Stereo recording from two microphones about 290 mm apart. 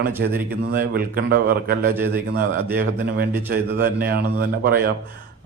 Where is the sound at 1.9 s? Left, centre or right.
Centre.